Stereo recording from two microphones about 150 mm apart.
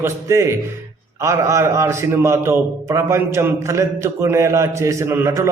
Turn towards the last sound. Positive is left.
turn(degrees=-20)  # may be behind; listen again after turning